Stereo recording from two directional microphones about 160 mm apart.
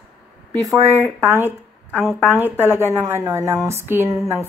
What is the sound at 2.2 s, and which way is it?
A woman's voice, 10° right (ahead or behind).